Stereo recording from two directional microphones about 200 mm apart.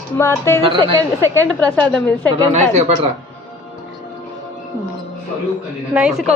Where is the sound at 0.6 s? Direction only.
25° right (ahead or behind).